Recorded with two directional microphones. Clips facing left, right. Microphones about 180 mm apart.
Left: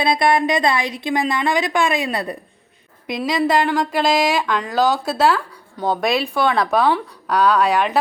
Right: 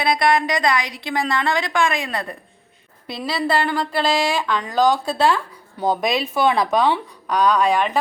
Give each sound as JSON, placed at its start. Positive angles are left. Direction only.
{"t": 0.0, "sound": "a woman's voice", "side_deg": 25}